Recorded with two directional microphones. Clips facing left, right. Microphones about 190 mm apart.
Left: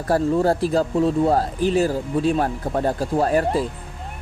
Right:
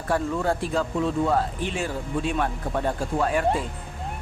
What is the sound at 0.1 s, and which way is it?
Speech, 35° left (ahead or behind).